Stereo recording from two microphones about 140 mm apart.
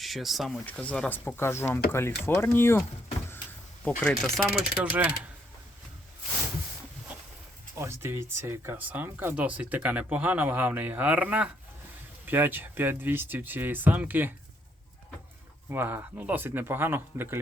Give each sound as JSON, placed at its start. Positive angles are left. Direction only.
{"t": 0.0, "sound": "speech", "side_deg": 0}
{"t": 0.6, "sound": "speech", "side_deg": 10}
{"t": 4.0, "sound": "speech", "side_deg": 0}
{"t": 7.8, "sound": "speech", "side_deg": -20}
{"t": 15.7, "sound": "speech", "side_deg": -15}